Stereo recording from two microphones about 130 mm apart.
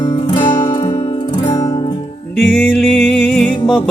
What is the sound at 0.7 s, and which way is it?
Music, 30° left (ahead or behind).